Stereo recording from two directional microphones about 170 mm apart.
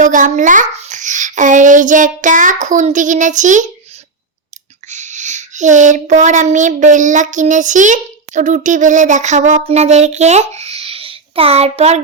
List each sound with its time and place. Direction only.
0.0 s speech: 50° right (ahead or behind)
4.9 s speech: 45° right (ahead or behind)
10.6 s a sound: 35° right (ahead or behind)